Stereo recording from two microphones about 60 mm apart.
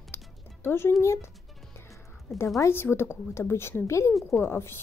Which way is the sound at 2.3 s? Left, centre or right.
Left.